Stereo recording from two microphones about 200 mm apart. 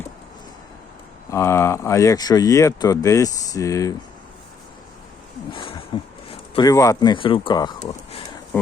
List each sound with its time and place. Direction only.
1.3 s speech: 15° left (ahead or behind)
5.5 s speech: 25° left (ahead or behind)